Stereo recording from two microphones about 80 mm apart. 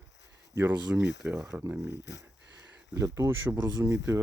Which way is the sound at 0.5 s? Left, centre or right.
Right.